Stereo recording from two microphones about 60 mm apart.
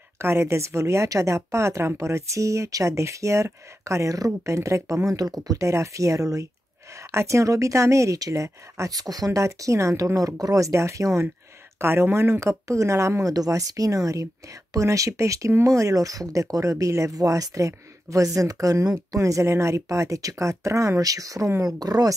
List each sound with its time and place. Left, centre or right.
0.2 s speech: right
5.7 s speech: right
7.0 s speech: right
11.8 s speech: right
21.6 s speech: right